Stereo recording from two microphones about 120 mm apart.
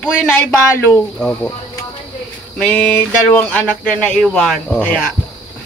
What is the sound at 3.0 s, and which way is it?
Speech, 10° left (ahead or behind).